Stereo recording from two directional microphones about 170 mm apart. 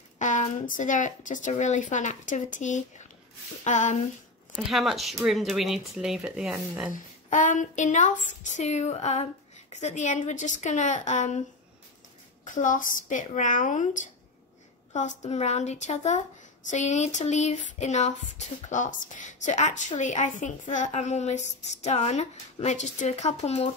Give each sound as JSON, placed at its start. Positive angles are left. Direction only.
{"t": 0.2, "sound": "a woman's voice", "side_deg": 45}
{"t": 4.6, "sound": "speech", "side_deg": 0}
{"t": 6.9, "sound": "a woman's voice", "side_deg": 50}
{"t": 12.4, "sound": "a woman's voice", "side_deg": 50}